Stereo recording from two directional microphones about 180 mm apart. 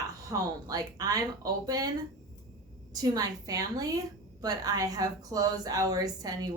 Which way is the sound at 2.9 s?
20° right (ahead or behind).